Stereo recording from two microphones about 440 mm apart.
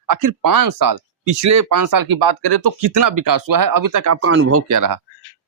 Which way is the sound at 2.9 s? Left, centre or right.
Right.